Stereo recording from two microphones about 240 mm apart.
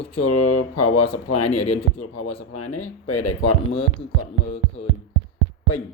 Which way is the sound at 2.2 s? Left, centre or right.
Left.